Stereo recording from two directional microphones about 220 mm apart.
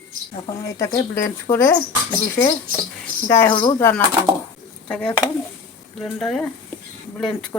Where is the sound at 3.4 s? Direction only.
20° left (ahead or behind).